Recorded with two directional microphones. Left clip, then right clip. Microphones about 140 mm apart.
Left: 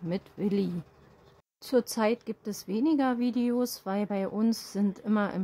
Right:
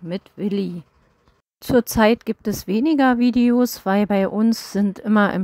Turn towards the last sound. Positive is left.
turn(degrees=-60)  # may be behind; listen again after turning